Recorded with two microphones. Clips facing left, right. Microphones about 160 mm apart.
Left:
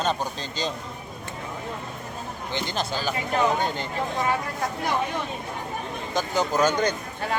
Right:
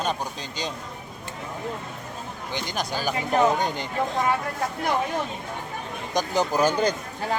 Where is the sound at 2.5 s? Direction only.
15° right (ahead or behind).